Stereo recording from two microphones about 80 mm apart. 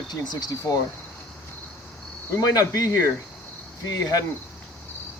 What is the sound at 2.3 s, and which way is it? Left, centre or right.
Cricket, left.